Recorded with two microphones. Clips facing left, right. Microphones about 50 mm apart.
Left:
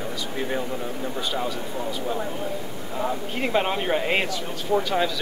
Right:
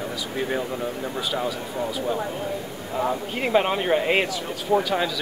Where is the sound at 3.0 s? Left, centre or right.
Centre.